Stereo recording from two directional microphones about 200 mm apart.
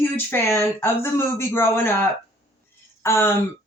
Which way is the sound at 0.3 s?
10° left (ahead or behind).